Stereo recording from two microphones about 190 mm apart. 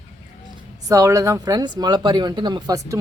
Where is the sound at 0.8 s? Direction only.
15° right (ahead or behind).